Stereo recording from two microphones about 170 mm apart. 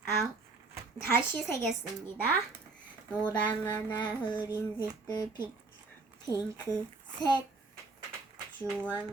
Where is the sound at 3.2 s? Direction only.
15° left (ahead or behind).